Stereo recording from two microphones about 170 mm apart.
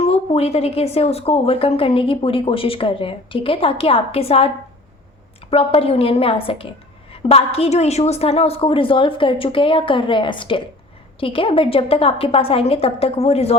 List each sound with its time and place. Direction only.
0.0 s a woman's voice: 35° left (ahead or behind)